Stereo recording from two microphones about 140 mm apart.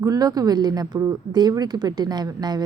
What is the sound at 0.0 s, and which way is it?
A woman's voice, 25° right (ahead or behind).